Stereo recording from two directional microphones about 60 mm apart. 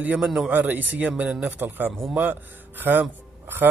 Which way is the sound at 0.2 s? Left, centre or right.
Centre.